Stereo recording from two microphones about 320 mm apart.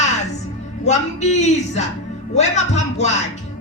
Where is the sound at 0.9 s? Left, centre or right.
Left.